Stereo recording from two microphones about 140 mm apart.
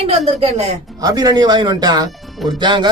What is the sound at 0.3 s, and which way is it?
Speech, 50° right (ahead or behind).